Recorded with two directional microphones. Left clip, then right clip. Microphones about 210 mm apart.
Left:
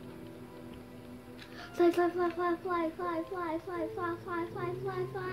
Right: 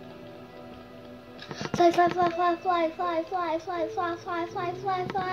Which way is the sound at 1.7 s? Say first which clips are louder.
Right 7 dB; 45° left (ahead or behind).